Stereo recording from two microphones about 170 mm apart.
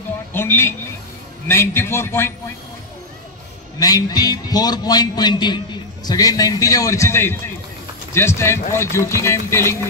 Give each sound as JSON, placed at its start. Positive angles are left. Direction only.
{"t": 0.3, "sound": "speech", "side_deg": 15}
{"t": 3.8, "sound": "a man's voice", "side_deg": 20}